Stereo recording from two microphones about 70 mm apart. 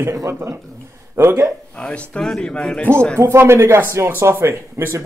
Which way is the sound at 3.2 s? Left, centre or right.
Right.